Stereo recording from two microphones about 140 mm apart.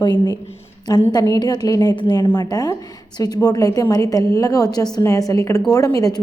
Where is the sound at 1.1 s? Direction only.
25° left (ahead or behind).